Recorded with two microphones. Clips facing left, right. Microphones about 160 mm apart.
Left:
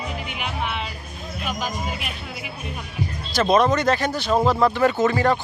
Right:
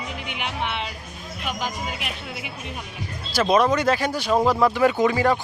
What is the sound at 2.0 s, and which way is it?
Speech, 90° right.